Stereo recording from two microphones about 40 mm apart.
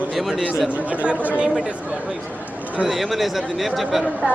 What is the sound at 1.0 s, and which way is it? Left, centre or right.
Speech, right.